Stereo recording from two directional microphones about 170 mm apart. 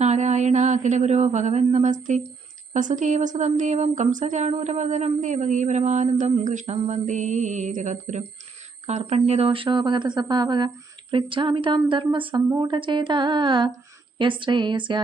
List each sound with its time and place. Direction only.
0.0 s mantra: 40° right (ahead or behind)
2.7 s speech: 45° right (ahead or behind); by 15.0 s 30° right (ahead or behind)